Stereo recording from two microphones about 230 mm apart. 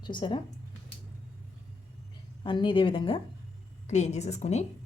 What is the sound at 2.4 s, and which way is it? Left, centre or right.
Speech, left.